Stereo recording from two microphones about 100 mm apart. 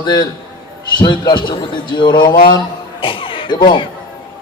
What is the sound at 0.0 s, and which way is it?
A man's voice, 45° left (ahead or behind).